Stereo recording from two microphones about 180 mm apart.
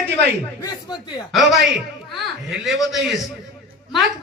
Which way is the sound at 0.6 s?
25° left (ahead or behind).